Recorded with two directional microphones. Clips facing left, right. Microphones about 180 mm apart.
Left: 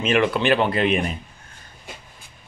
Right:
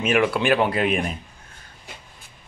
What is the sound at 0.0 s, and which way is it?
Speech, 10° right (ahead or behind).